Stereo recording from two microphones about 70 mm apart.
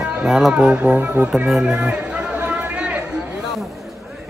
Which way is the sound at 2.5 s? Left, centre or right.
Centre.